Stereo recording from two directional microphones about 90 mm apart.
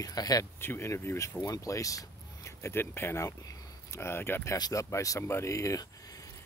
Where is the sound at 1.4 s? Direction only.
40° left (ahead or behind).